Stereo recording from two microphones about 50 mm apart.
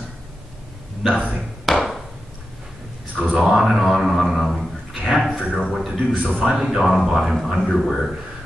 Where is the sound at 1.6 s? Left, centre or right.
Centre.